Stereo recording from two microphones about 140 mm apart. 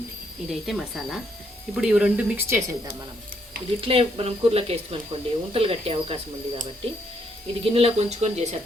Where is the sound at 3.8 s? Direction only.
40° right (ahead or behind).